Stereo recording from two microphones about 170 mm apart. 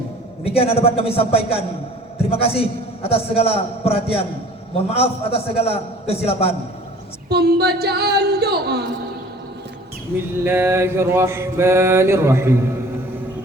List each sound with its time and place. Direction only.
0.4 s a man's voice: 35° left (ahead or behind)
7.3 s a sound: 70° right (ahead or behind)
10.4 s mantra: 15° right (ahead or behind)